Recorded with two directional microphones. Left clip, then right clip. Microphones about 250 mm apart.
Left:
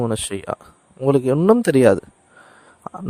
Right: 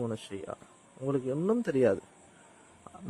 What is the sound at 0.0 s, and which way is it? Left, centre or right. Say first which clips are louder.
Speech: left 13 dB; left.